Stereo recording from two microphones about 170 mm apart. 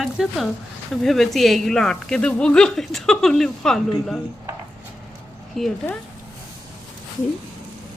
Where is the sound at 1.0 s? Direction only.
Centre (ahead or behind).